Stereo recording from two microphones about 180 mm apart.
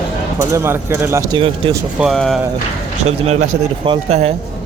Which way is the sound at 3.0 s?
35° right (ahead or behind).